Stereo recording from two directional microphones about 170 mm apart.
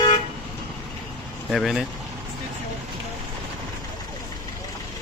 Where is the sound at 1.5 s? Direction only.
Centre (ahead or behind).